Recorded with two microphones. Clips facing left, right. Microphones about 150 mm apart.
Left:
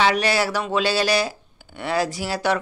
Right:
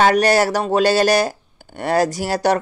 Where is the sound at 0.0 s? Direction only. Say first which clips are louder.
Right 6 dB; 45° right (ahead or behind).